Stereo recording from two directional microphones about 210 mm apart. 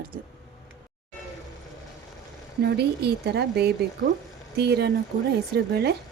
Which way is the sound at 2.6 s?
50° right (ahead or behind).